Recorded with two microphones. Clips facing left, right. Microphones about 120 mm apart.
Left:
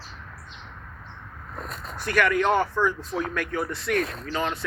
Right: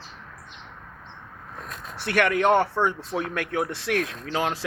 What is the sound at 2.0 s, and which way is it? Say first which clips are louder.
Speech: right 1 dB; 65° right (ahead or behind).